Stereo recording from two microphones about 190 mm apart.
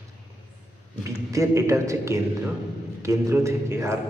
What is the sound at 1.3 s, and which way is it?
A man's voice, 15° right (ahead or behind).